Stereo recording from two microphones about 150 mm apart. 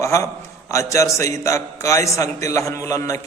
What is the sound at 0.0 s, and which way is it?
A man's voice, 20° left (ahead or behind).